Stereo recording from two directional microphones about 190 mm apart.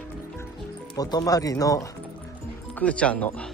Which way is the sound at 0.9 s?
20° left (ahead or behind).